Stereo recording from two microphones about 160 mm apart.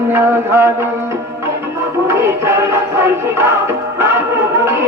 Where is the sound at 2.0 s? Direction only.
15° right (ahead or behind).